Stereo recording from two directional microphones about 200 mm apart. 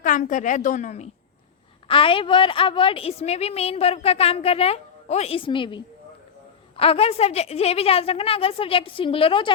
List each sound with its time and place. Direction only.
0.0 s a woman's voice: 40° left (ahead or behind)